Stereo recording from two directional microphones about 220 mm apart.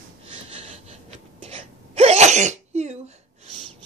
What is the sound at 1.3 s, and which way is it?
Sneeze, 25° right (ahead or behind).